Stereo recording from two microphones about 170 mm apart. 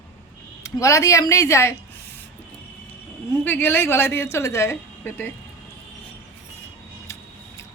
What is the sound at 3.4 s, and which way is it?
Speech, 10° left (ahead or behind).